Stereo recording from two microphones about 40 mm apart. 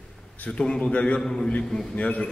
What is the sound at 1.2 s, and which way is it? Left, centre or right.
Speech, centre.